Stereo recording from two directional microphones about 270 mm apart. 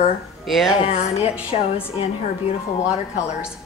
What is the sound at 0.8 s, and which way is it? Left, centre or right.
A woman's voice, left.